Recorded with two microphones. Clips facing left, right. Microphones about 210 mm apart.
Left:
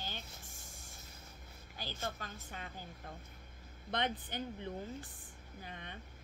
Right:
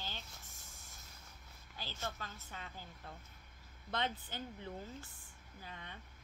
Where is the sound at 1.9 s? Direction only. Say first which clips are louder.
Left 1 dB; 45° left (ahead or behind).